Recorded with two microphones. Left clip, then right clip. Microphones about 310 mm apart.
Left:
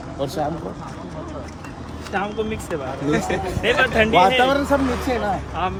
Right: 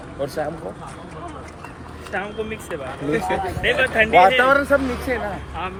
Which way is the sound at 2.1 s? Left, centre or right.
Centre.